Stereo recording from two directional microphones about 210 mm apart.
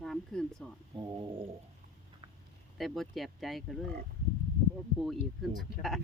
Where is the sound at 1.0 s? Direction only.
20° right (ahead or behind).